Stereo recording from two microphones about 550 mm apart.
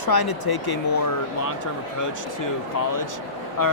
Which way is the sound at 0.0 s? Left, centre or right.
Left.